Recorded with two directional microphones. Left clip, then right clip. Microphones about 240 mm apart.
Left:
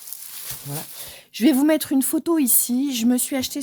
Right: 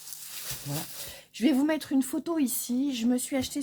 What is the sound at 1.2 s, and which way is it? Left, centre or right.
A woman's voice, left.